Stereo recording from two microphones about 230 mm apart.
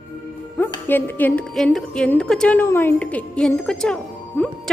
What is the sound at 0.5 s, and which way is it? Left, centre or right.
A woman's voice, centre.